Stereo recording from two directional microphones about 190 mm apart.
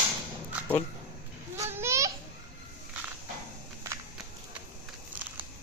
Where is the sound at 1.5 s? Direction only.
15° right (ahead or behind).